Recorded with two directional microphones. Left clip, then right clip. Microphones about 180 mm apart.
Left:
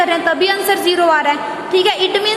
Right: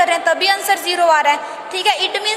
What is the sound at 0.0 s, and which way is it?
A woman's voice, 25° right (ahead or behind).